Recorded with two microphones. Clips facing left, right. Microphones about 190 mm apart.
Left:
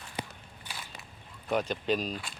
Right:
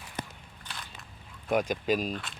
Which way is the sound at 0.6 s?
5° left (ahead or behind).